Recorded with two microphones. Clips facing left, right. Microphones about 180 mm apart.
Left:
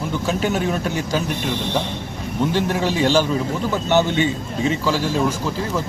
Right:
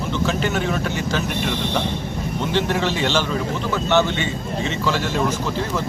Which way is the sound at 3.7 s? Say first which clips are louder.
Left 1 dB; 15° left (ahead or behind).